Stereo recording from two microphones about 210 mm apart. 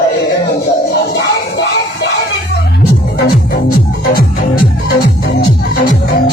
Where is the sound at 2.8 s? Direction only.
50° left (ahead or behind).